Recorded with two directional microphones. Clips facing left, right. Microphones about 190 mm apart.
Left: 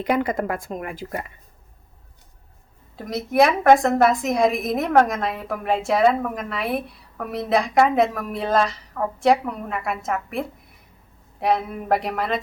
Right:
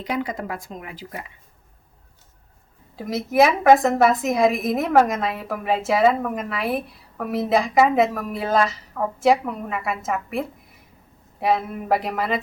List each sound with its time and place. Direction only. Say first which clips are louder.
0.0 s a woman's voice: left 5 dB; 55° left (ahead or behind)
2.9 s a woman's voice: right 1 dB; centre (ahead or behind)